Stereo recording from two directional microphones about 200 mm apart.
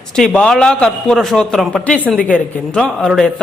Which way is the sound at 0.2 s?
5° left (ahead or behind).